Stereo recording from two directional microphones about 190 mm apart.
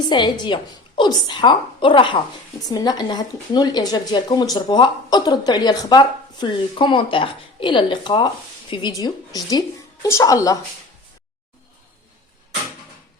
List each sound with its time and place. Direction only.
0.1 s a woman's voice: 25° left (ahead or behind)